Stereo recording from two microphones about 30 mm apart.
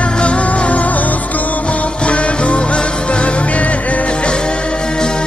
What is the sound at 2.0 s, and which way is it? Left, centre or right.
Music, left.